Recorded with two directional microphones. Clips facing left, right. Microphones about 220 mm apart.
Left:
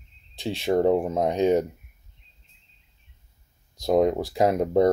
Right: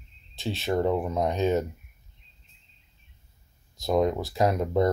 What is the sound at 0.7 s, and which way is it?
Speech, 35° left (ahead or behind).